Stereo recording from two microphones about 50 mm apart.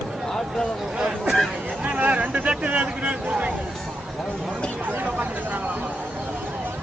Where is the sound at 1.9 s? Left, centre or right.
Right.